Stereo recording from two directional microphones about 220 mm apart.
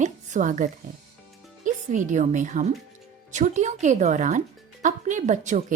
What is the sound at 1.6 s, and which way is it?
Speech, 35° right (ahead or behind).